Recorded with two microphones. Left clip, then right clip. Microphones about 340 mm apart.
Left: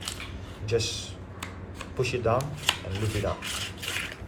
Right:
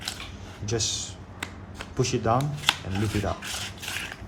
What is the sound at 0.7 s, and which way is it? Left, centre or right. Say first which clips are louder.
Speech: even; right.